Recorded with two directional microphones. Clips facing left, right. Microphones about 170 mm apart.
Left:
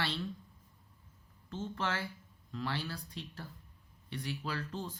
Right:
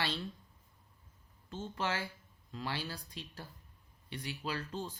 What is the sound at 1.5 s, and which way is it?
Speech, 15° right (ahead or behind).